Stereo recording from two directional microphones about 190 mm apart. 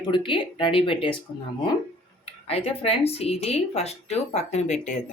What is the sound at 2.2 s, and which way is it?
Speech, 30° left (ahead or behind).